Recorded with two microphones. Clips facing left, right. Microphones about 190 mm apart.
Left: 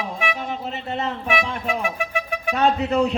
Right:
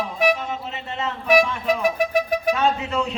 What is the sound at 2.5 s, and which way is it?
Speech, 35° left (ahead or behind).